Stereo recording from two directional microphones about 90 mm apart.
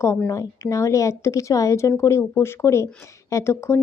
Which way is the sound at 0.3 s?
35° left (ahead or behind).